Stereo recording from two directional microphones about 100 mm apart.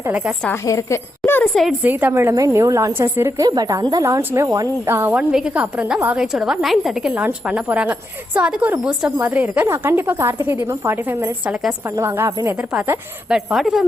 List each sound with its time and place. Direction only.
0.6 s a woman's voice: 35° left (ahead or behind)
1.2 s a sound: 20° left (ahead or behind)
1.8 s speech: 20° right (ahead or behind)
2.3 s a woman's voice: 30° right (ahead or behind)
3.4 s a woman's voice: 40° right (ahead or behind)
4.0 s a woman's voice: 25° right (ahead or behind)
4.9 s speech: 20° right (ahead or behind)
5.3 s a woman's voice: 10° right (ahead or behind)
7.1 s a woman's voice: 15° right (ahead or behind)
13.2 s a woman's voice: 5° right (ahead or behind)